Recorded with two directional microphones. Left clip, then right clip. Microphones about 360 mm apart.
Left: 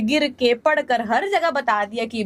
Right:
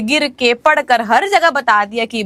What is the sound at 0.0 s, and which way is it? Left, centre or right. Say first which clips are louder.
A woman's voice: right 5 dB; centre.